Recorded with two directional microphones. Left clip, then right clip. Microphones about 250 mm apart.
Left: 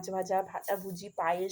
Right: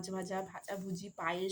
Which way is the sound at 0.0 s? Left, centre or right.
Centre.